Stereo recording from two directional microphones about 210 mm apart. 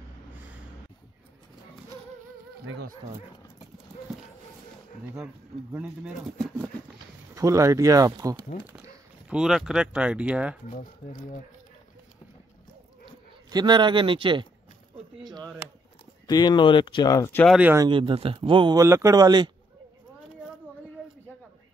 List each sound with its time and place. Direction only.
2.6 s speech: 80° right
5.0 s speech: 10° right (ahead or behind)
7.3 s speech: 15° right (ahead or behind)
10.7 s speech: 40° left (ahead or behind)
13.0 s speech: 20° right (ahead or behind)
16.3 s speech: 20° left (ahead or behind)
17.5 s speech: 5° right (ahead or behind)
17.8 s speech: 25° right (ahead or behind)